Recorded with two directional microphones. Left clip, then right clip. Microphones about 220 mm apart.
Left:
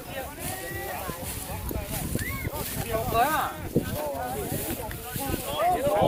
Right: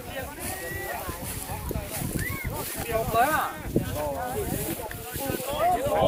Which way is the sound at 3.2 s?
45° right (ahead or behind).